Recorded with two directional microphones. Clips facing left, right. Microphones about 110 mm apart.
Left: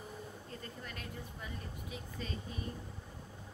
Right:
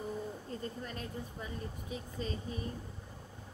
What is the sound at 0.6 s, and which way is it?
Speech, 30° right (ahead or behind).